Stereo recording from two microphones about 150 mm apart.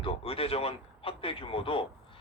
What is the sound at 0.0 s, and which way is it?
A man's voice, 40° left (ahead or behind).